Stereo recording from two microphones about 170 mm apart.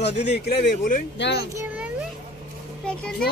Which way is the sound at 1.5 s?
10° right (ahead or behind).